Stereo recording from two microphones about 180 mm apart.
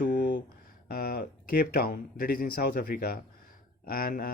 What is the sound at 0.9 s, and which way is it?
Speech, 55° left (ahead or behind).